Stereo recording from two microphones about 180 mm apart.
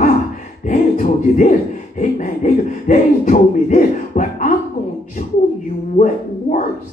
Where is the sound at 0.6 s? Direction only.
45° left (ahead or behind).